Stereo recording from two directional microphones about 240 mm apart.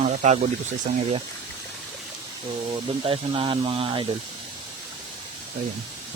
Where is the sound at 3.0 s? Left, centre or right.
Right.